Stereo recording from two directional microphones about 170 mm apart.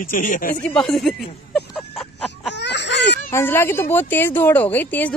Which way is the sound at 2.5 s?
90° left.